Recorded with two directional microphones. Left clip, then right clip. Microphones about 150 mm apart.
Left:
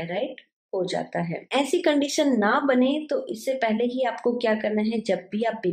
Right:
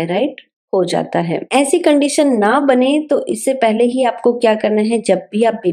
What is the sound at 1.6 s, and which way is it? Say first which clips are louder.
A woman's voice: right 9 dB; 40° right (ahead or behind).